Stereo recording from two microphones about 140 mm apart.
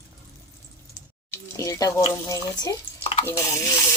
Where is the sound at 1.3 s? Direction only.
20° left (ahead or behind).